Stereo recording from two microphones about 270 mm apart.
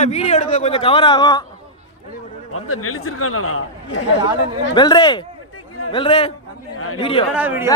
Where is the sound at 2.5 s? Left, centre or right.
Left.